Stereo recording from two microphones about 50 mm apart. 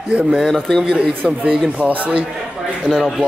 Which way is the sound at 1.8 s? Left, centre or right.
Right.